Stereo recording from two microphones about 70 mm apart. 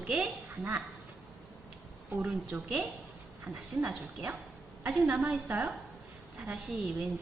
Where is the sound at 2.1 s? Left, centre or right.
Centre.